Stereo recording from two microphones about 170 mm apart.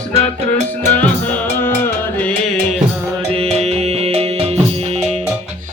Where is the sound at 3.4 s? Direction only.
35° right (ahead or behind).